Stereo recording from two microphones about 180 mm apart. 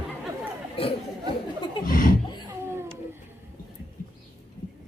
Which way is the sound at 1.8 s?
50° left (ahead or behind).